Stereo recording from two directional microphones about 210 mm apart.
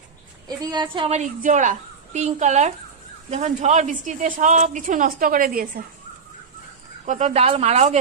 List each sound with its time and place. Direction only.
0.5 s a woman's voice: 20° right (ahead or behind); by 5.9 s 45° right (ahead or behind)
7.1 s a woman's voice: 35° right (ahead or behind)